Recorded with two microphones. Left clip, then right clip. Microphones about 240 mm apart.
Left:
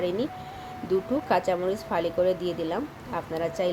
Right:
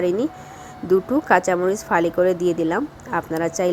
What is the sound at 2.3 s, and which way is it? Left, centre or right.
Speech, right.